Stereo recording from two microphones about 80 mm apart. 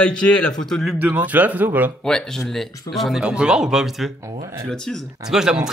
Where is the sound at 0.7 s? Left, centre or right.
Centre.